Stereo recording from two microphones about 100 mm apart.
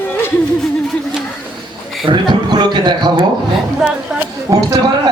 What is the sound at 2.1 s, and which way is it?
A man's voice, 50° right (ahead or behind).